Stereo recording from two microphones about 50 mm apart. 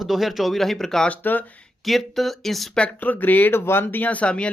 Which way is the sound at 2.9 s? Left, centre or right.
Left.